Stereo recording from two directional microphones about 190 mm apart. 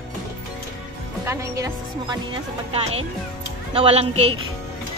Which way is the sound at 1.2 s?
15° right (ahead or behind).